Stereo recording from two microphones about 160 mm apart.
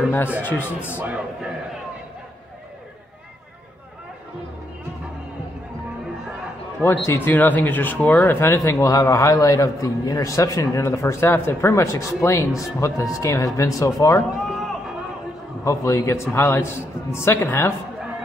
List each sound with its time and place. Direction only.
0.4 s a man's voice: 10° left (ahead or behind)
0.9 s a man's voice: 10° right (ahead or behind)
7.1 s a man's voice: 10° left (ahead or behind)
14.5 s run: centre (ahead or behind)
15.6 s a man's voice: 20° left (ahead or behind)